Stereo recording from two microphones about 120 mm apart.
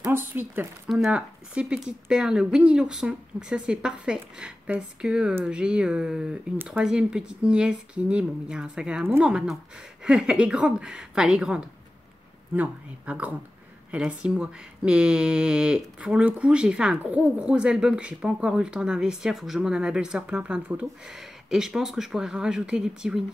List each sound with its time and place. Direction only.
0.0 s speech: 15° right (ahead or behind)